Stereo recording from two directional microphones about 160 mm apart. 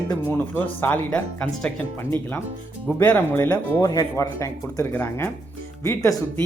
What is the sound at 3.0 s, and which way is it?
Speech, 10° left (ahead or behind).